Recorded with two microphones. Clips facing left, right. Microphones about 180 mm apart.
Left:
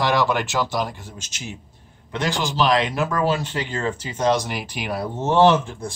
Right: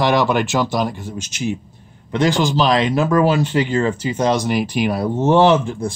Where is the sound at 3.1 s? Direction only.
10° right (ahead or behind).